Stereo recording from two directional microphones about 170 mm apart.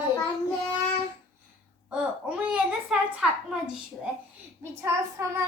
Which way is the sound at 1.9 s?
5° right (ahead or behind).